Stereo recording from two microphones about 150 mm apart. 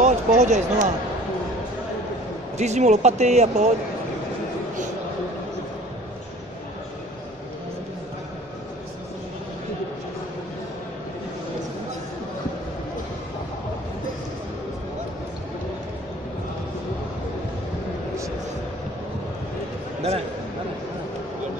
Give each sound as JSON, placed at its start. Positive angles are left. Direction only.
{"t": 0.0, "sound": "speech", "side_deg": -55}
{"t": 2.5, "sound": "speech", "side_deg": -50}